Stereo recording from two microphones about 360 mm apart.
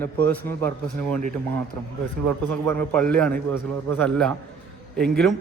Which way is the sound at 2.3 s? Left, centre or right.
Centre.